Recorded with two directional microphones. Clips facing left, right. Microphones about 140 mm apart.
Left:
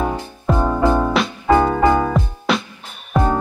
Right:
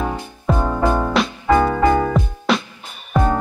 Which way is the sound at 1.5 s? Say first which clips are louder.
Left 1 dB; 15° left (ahead or behind).